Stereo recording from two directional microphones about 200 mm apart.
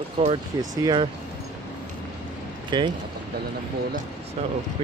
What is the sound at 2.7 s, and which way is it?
Speech, 20° right (ahead or behind).